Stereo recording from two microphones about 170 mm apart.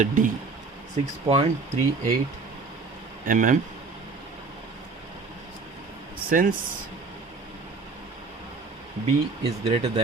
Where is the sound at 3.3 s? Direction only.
50° right (ahead or behind).